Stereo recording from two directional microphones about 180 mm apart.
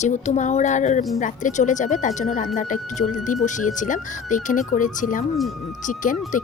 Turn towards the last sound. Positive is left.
turn(degrees=45)  # may be behind; listen again after turning